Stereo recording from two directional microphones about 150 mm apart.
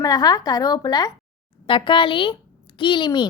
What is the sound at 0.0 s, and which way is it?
A woman's voice, 25° left (ahead or behind).